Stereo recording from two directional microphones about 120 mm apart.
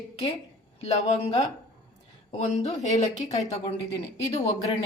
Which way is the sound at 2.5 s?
70° left (ahead or behind).